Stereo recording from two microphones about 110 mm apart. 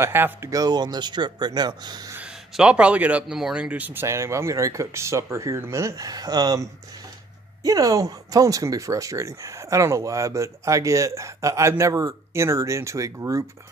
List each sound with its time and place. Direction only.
0.0 s a man's voice: 20° right (ahead or behind)
0.5 s speech: 35° right (ahead or behind)
2.1 s a man's voice: 10° right (ahead or behind); by 13.5 s 30° right (ahead or behind)